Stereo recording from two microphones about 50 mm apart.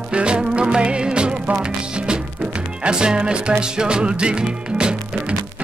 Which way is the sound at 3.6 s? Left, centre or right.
Centre.